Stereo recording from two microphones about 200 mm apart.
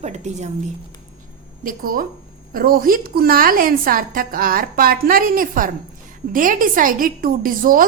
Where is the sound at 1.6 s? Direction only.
45° right (ahead or behind).